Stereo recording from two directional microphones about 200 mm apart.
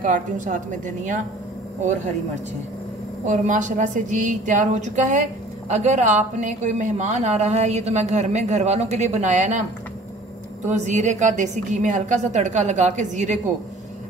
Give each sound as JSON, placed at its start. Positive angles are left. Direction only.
{"t": 0.0, "sound": "speech", "side_deg": -40}
{"t": 3.3, "sound": "speech", "side_deg": -40}
{"t": 10.7, "sound": "speech", "side_deg": -35}